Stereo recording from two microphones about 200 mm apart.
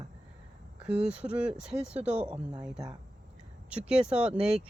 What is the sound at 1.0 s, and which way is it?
Speech, 5° right (ahead or behind).